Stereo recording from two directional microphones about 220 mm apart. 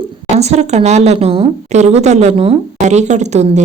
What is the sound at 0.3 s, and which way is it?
A woman's voice, 30° right (ahead or behind).